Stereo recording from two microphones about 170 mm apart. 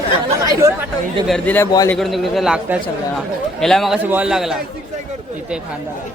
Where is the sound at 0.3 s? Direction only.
15° right (ahead or behind).